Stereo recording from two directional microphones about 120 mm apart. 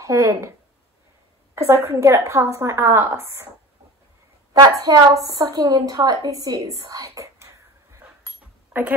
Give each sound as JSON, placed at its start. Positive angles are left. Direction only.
{"t": 0.0, "sound": "speech", "side_deg": -25}
{"t": 1.5, "sound": "a sound", "side_deg": -20}
{"t": 1.9, "sound": "speech", "side_deg": -20}
{"t": 4.6, "sound": "a woman's voice", "side_deg": -30}